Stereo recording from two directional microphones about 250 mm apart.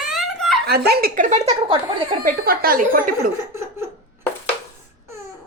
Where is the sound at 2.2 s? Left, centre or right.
Right.